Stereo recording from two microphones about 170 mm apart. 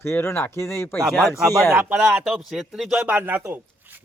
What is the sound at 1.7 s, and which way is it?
Speech, 5° right (ahead or behind).